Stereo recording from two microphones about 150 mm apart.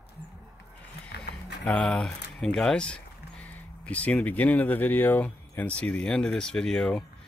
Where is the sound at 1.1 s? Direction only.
90° left.